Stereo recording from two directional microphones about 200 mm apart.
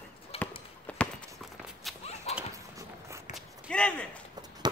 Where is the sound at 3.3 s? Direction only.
5° left (ahead or behind).